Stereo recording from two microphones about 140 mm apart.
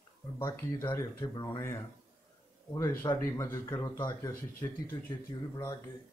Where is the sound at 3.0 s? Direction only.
20° left (ahead or behind).